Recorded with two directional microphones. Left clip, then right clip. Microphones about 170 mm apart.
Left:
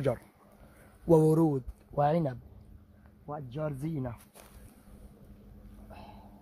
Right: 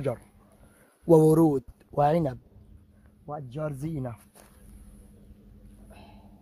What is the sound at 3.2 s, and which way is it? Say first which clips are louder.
Speech: right 2 dB; 65° right (ahead or behind).